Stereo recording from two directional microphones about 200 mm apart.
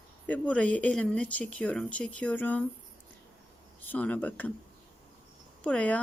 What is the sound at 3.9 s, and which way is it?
Speech, 10° left (ahead or behind).